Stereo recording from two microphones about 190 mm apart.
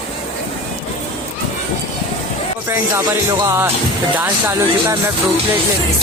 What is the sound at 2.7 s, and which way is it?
Speech, 15° right (ahead or behind).